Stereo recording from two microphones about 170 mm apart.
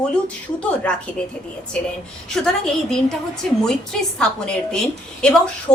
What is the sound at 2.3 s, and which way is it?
A woman's voice, 5° left (ahead or behind).